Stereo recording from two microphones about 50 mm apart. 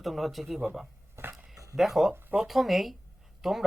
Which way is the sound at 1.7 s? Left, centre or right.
Centre.